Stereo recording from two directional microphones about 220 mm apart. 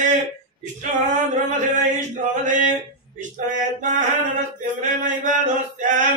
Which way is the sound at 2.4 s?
35° right (ahead or behind).